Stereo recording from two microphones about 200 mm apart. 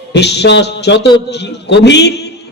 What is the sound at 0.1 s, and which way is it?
A man's voice, 55° left (ahead or behind).